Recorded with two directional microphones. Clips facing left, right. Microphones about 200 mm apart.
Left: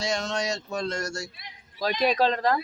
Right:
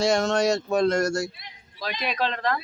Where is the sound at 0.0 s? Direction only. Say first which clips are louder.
Right 7 dB; 50° right (ahead or behind).